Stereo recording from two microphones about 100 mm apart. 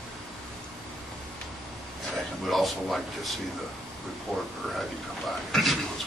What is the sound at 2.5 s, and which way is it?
Speech, centre (ahead or behind).